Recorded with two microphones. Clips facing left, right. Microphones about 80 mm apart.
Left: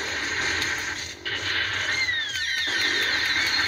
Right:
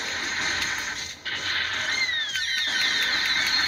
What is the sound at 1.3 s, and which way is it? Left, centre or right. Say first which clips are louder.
Music: left 1 dB; right.